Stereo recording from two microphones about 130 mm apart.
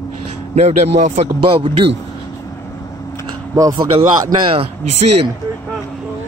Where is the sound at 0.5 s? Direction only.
55° right (ahead or behind).